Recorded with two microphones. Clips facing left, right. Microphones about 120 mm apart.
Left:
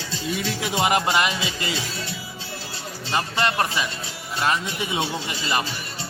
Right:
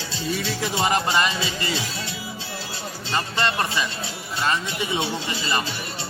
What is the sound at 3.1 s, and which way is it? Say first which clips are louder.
Speech: left 1 dB; 10° left (ahead or behind).